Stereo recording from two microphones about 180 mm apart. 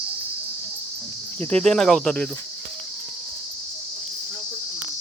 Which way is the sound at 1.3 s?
10° left (ahead or behind).